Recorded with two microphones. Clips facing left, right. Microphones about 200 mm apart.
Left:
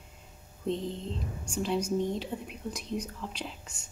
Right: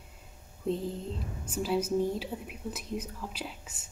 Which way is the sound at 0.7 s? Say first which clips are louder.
Even; 5° right (ahead or behind).